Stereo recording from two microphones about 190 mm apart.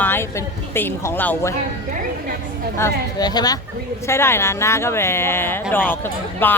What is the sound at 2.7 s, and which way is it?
Speech, 15° left (ahead or behind).